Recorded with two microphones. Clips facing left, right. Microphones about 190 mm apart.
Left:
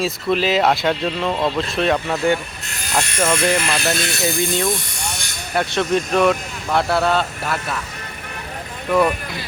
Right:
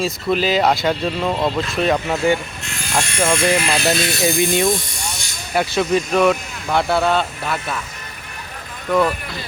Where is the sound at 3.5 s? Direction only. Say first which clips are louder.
Right 1 dB; 10° right (ahead or behind).